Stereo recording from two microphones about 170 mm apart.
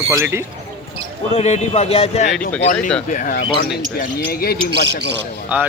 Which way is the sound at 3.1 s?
55° left (ahead or behind).